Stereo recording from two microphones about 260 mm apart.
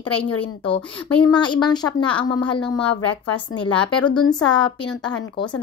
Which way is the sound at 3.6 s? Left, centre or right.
Centre.